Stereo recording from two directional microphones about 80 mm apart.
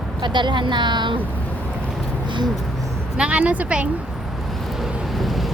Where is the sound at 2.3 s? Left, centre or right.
Right.